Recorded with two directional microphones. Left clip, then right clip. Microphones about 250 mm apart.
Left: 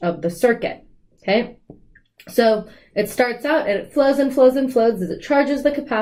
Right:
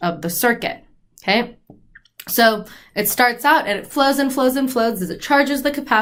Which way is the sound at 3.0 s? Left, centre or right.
Centre.